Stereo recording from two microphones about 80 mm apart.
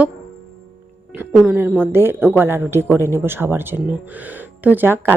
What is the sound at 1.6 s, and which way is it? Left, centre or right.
A woman's voice, right.